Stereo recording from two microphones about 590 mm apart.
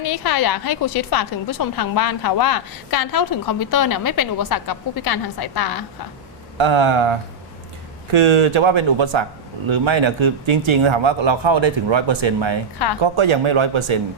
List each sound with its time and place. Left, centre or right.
0.1 s a woman's voice: left
6.6 s speech: right